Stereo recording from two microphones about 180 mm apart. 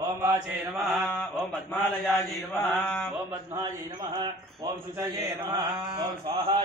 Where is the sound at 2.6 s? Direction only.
10° left (ahead or behind).